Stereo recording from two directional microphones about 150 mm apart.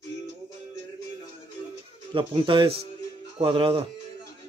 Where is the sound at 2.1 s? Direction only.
35° right (ahead or behind).